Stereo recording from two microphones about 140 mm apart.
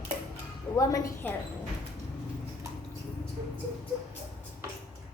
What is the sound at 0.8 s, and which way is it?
Speech, 15° left (ahead or behind).